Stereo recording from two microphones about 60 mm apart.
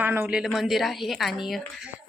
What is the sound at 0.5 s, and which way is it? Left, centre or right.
A woman's voice, centre.